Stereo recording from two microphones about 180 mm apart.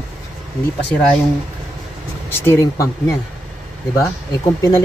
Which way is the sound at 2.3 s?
15° left (ahead or behind).